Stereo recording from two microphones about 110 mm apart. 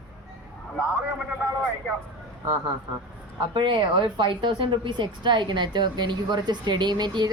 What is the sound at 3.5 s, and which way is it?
A woman's voice, 45° right (ahead or behind).